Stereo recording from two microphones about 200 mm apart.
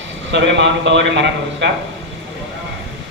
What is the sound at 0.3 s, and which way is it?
A man's voice, 60° right (ahead or behind).